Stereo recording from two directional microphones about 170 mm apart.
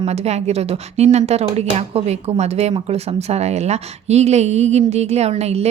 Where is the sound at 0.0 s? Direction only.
40° right (ahead or behind).